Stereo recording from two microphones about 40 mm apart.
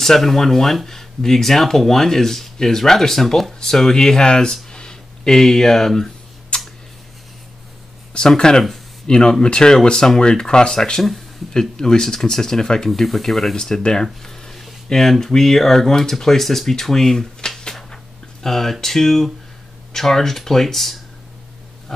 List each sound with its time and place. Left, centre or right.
0.0 s speech: centre
6.5 s a sound: left
8.2 s speech: centre